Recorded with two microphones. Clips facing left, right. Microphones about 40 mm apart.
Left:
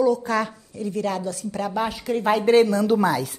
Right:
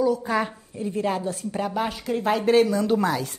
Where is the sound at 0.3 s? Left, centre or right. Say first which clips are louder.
Left 1 dB; centre; by 1.6 s right.